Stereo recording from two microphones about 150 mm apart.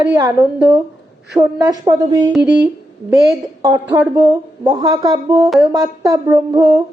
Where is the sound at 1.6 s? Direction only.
25° right (ahead or behind).